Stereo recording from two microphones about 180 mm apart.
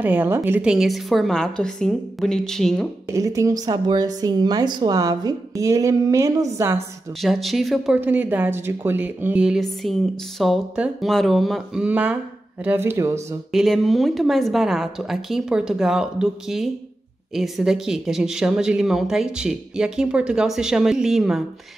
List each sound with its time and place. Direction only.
0.0 s speech: 10° right (ahead or behind)
3.1 s a woman's voice: 15° right (ahead or behind)
7.2 s speech: centre (ahead or behind); by 13.4 s 15° right (ahead or behind)
13.5 s speech: centre (ahead or behind)